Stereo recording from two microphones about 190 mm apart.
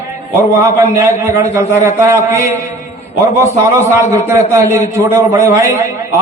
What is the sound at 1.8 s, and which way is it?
Speech, 15° right (ahead or behind).